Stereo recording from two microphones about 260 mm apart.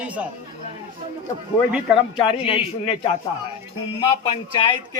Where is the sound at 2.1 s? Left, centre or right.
Centre.